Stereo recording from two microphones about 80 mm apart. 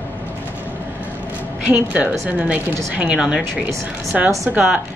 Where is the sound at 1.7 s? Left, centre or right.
Centre.